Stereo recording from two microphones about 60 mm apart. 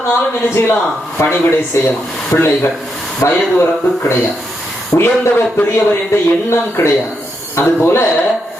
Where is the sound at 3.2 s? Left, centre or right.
Left.